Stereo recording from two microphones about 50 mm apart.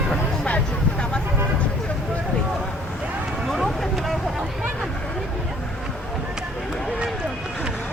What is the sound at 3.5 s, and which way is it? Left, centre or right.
Vehicle, centre.